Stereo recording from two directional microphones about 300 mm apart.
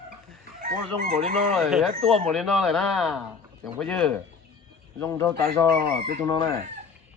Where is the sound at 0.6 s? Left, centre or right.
Right.